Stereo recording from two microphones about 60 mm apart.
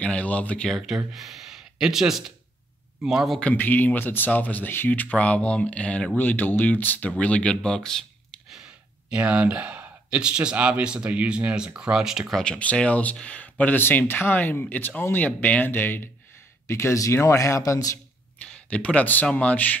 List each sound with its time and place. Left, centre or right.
0.0 s speech: left
0.7 s speech: centre
3.5 s speech: left; by 8.4 s centre
9.1 s speech: centre
12.5 s speech: left
13.7 s speech: left
16.6 s speech: left
18.7 s speech: left